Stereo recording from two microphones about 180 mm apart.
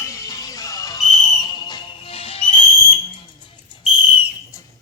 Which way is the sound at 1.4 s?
25° left (ahead or behind).